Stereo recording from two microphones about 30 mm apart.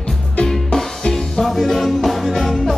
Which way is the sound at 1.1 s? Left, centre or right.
Centre.